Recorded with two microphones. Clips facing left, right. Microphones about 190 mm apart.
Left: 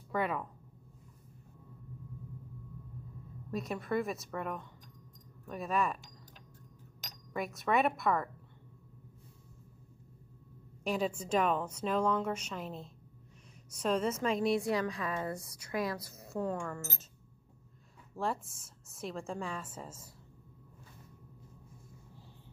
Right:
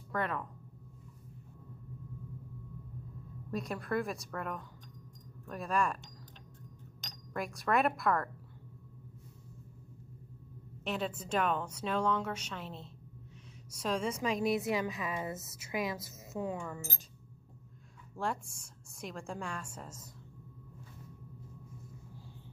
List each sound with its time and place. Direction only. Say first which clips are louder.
0.1 s a woman's voice: left 2 dB; 5° left (ahead or behind)
3.5 s a woman's voice: left 1 dB; centre (ahead or behind)
7.0 s speech: left 1 dB; centre (ahead or behind)
10.9 s a woman's voice: left 3 dB; centre (ahead or behind)
13.8 s a woman's voice: left 2 dB; 5° left (ahead or behind)
15.0 s a woman's voice: left 1 dB; 20° right (ahead or behind)
16.3 s a woman's voice: left 2 dB; 5° right (ahead or behind)
18.1 s a woman's voice: left 1 dB; centre (ahead or behind)